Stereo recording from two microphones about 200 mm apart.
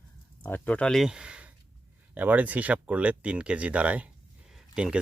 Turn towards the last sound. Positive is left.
turn(degrees=-5)  # may be behind; listen again after turning